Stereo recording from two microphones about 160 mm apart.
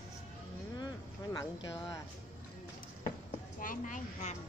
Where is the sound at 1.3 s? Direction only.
20° left (ahead or behind).